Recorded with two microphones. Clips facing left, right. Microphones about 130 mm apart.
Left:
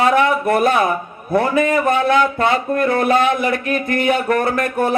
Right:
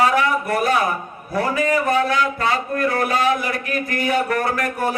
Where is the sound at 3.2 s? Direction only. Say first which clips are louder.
Left 3 dB; 55° left (ahead or behind).